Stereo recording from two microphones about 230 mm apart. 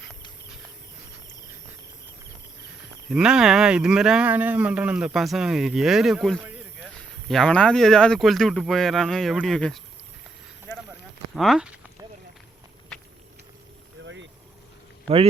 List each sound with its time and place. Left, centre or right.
3.1 s speech: centre
11.3 s a sound: centre
14.0 s boat: right